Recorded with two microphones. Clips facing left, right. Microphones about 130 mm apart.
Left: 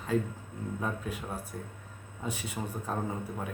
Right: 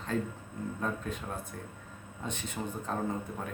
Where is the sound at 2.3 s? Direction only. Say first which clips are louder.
Left 1 dB; 5° left (ahead or behind).